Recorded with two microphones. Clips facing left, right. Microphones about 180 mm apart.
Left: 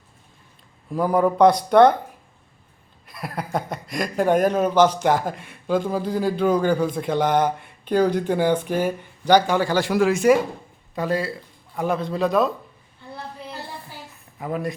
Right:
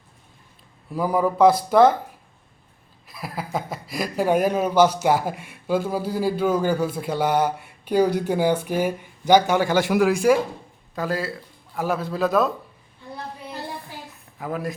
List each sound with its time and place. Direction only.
0.9 s speech: 5° right (ahead or behind)
3.1 s speech: centre (ahead or behind)
10.0 s speech: centre (ahead or behind)
14.3 s speech: centre (ahead or behind)